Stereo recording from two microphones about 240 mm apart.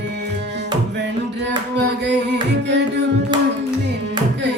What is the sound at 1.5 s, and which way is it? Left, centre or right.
Music, right.